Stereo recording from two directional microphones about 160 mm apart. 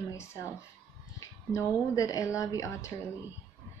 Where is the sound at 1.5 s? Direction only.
20° left (ahead or behind).